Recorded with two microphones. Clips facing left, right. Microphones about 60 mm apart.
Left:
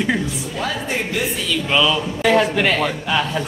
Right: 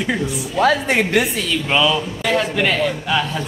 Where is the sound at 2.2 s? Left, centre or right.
Centre.